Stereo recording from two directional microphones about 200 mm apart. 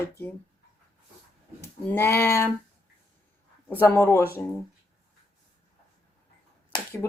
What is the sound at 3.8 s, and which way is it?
Speech, 10° left (ahead or behind).